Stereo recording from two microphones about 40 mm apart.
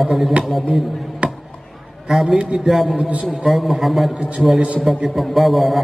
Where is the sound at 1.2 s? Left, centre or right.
Right.